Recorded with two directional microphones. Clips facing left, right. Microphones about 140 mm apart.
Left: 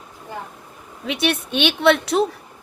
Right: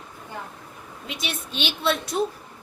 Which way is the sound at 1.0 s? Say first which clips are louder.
Left 11 dB; 70° left (ahead or behind).